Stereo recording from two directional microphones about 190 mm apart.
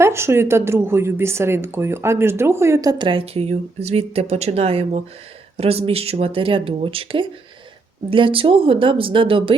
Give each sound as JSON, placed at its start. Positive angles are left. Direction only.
{"t": 0.0, "sound": "speech", "side_deg": -15}